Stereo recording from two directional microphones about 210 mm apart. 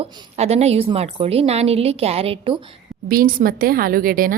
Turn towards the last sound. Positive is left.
turn(degrees=-40)  # may be behind; listen again after turning